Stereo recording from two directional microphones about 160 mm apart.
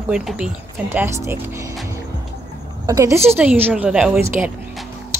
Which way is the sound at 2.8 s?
20° right (ahead or behind).